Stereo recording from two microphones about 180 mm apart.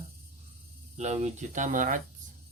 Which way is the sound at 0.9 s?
40° right (ahead or behind).